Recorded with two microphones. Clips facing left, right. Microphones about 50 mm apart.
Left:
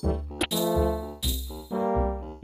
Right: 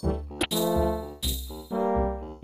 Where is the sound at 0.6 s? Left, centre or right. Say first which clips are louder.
Even; left.